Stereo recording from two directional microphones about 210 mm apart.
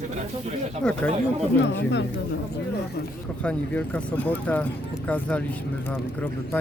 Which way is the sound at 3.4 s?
5° left (ahead or behind).